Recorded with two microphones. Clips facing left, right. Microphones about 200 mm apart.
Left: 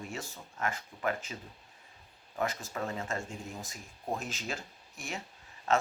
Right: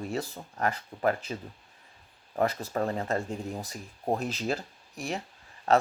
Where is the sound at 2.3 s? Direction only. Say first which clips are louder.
Right 7 dB; 35° right (ahead or behind).